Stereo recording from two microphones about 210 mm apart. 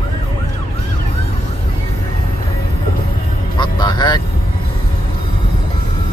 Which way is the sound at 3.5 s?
20° left (ahead or behind).